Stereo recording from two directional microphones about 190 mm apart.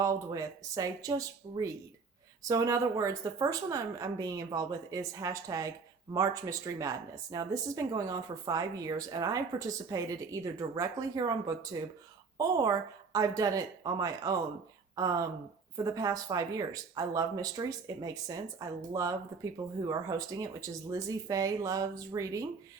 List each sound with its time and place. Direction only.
0.0 s speech: 15° right (ahead or behind)